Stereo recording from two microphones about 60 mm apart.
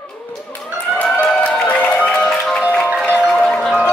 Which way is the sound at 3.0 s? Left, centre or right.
Left.